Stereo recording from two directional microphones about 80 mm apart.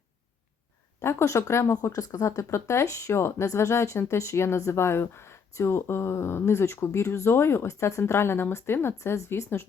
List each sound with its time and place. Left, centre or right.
1.0 s speech: left
1.7 s speech: left